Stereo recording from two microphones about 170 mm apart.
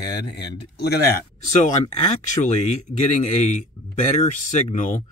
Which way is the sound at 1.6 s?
40° left (ahead or behind).